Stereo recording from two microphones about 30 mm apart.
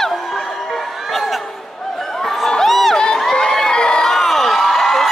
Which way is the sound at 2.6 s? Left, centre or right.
Centre.